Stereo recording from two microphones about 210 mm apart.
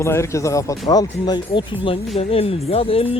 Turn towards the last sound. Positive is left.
turn(degrees=25)  # may be behind; listen again after turning